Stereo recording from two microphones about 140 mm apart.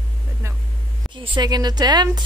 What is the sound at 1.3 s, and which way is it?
Speech, 30° right (ahead or behind).